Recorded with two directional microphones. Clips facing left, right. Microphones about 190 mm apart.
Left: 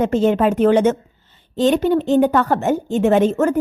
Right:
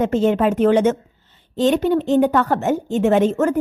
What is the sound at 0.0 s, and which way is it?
A woman's voice, 35° left (ahead or behind).